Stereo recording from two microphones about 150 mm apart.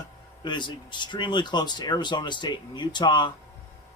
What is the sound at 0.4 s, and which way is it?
Speech, 30° left (ahead or behind).